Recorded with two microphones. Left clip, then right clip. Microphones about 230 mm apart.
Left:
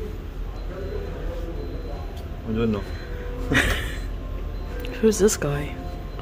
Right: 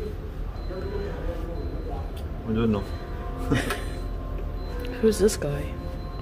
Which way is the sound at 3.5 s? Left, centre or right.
Centre.